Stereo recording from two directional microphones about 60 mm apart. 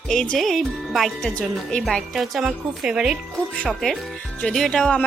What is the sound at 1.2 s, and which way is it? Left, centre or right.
Speech, centre.